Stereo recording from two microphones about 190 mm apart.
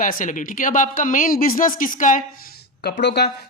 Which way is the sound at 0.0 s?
45° left (ahead or behind).